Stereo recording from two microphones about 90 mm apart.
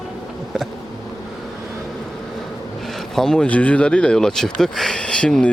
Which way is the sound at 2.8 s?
5° left (ahead or behind).